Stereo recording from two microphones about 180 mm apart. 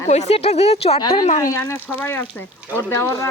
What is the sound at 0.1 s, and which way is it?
Speech, 40° left (ahead or behind).